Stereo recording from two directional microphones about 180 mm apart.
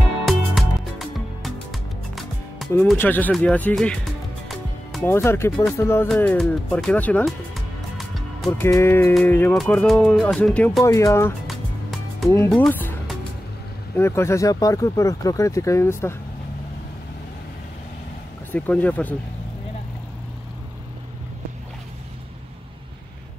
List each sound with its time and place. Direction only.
0.2 s music: centre (ahead or behind)
5.0 s speech: 15° left (ahead or behind)
8.5 s speech: 15° left (ahead or behind)
10.8 s speech: 15° left (ahead or behind)
11.4 s music: centre (ahead or behind)
12.4 s speech: 10° left (ahead or behind)
13.9 s speech: 15° left (ahead or behind)
18.5 s speech: 10° left (ahead or behind)